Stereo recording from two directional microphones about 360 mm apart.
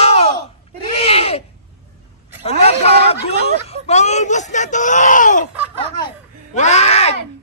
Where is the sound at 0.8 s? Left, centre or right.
Centre.